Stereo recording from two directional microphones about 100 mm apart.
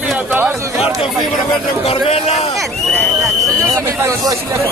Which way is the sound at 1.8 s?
85° left.